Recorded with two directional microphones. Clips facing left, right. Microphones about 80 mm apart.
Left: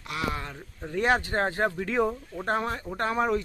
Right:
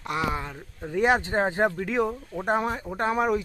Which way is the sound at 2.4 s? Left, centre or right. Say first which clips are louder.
Right 3 dB; centre.